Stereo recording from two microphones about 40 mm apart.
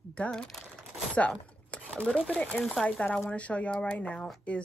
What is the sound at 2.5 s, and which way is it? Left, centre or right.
Speech, left.